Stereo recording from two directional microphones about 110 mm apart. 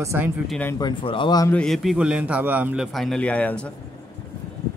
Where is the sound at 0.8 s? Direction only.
45° left (ahead or behind).